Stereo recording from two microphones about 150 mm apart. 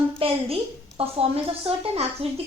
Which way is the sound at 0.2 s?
40° right (ahead or behind).